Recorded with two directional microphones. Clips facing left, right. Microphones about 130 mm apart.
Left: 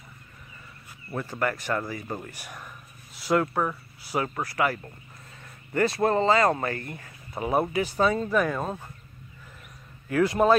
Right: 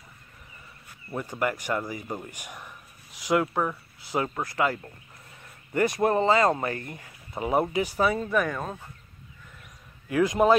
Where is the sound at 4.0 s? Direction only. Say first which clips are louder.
Even; 20° right (ahead or behind).